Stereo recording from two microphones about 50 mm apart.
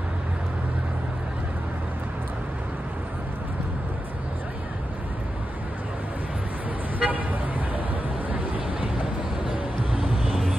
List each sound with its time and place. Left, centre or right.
7.0 s vehicle: right
9.9 s vehicle: centre